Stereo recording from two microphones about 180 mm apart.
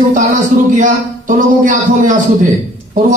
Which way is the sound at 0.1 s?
45° right (ahead or behind).